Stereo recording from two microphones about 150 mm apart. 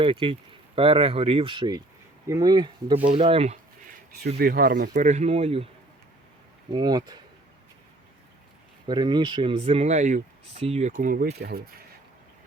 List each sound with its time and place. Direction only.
0.0 s speech: 35° right (ahead or behind)
3.2 s speech: 40° right (ahead or behind)
4.4 s speech: 80° right
4.9 s speech: 50° right (ahead or behind)
6.7 s speech: 25° right (ahead or behind)
8.9 s speech: 30° right (ahead or behind); by 11.6 s 90° right